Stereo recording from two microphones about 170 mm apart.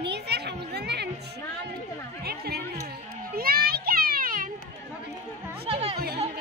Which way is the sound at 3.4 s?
60° right (ahead or behind).